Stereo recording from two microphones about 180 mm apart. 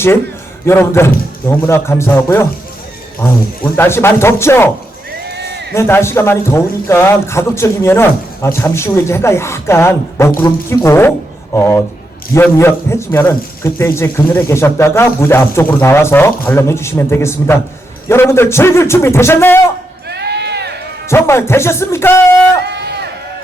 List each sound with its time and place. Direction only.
0.6 s a man's voice: 15° left (ahead or behind)
5.3 s a sound: 70° right (ahead or behind)
5.7 s a man's voice: 15° left (ahead or behind)
20.1 s crowd: 70° right (ahead or behind)
21.1 s a man's voice: 15° left (ahead or behind)
22.6 s run: 70° right (ahead or behind)